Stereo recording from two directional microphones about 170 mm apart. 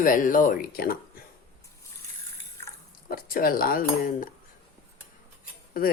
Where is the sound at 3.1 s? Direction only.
60° left (ahead or behind).